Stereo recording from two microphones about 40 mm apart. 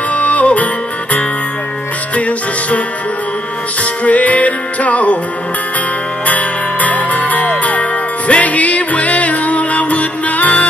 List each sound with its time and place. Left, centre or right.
0.1 s music: left
2.1 s music: left
4.0 s music: left
6.2 s music: left